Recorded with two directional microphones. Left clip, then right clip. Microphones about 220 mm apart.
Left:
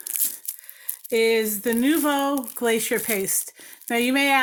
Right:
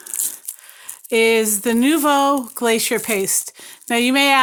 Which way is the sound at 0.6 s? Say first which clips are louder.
Right 3 dB; 40° right (ahead or behind).